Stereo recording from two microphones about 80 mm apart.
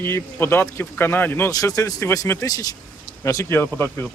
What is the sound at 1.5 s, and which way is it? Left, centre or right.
Speech, left.